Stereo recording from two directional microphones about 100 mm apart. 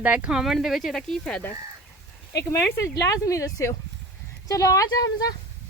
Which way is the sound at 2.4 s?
30° left (ahead or behind).